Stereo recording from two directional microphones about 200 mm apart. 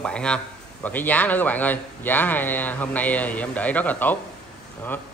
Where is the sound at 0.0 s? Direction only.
5° left (ahead or behind).